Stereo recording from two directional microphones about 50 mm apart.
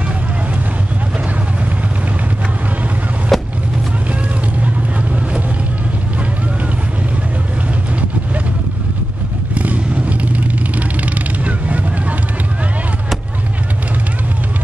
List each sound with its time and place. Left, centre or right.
3.3 s vehicle: centre
9.5 s vehicle: right